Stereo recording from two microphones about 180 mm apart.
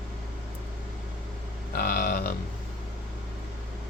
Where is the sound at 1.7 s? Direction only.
55° left (ahead or behind).